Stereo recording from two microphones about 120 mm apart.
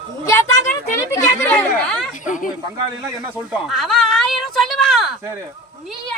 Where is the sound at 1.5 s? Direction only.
15° left (ahead or behind).